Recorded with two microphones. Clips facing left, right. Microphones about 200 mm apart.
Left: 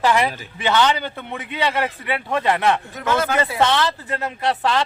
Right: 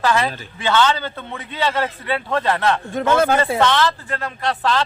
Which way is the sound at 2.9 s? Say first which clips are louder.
Right 5 dB; 30° right (ahead or behind).